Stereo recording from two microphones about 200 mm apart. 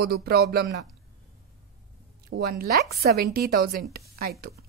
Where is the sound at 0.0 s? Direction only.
50° right (ahead or behind).